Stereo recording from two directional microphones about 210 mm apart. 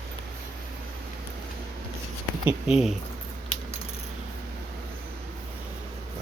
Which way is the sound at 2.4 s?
Centre (ahead or behind).